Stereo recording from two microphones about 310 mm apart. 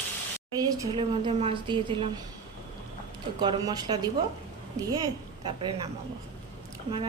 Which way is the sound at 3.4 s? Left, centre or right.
Centre.